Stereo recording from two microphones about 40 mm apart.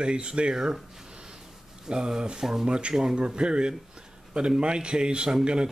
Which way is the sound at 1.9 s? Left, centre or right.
Right.